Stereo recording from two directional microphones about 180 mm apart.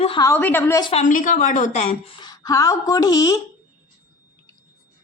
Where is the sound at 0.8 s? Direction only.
35° left (ahead or behind); by 3.4 s 20° left (ahead or behind).